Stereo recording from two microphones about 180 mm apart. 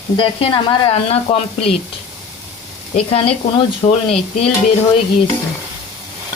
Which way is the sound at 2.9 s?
30° left (ahead or behind).